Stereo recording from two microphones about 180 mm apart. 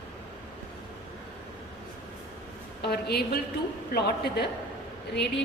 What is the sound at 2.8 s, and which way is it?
A woman's voice, 60° left (ahead or behind).